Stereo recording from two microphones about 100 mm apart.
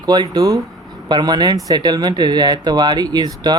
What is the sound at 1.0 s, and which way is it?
Speech, 45° right (ahead or behind).